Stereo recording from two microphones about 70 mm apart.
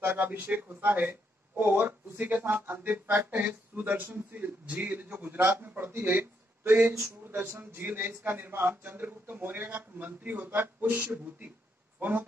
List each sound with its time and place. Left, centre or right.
0.0 s speech: right